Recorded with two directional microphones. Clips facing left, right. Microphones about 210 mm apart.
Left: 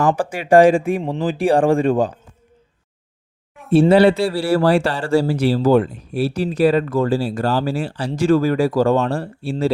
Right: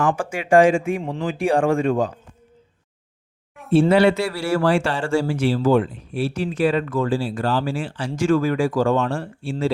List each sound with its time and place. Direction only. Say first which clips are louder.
0.2 s speech: left 3 dB; 35° left (ahead or behind)
3.7 s speech: left 3 dB; 35° left (ahead or behind)